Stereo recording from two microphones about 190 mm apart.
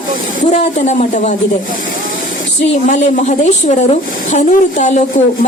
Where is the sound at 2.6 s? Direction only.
40° left (ahead or behind).